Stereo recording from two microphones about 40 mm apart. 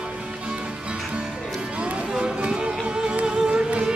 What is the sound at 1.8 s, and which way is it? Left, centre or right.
Music, right.